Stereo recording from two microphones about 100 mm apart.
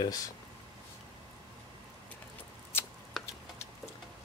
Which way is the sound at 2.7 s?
20° left (ahead or behind).